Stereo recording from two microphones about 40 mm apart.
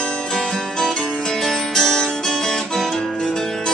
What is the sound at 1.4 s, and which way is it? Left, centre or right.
Music, centre.